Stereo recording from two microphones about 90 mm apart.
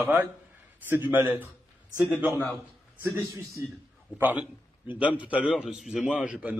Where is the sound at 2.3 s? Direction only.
20° left (ahead or behind).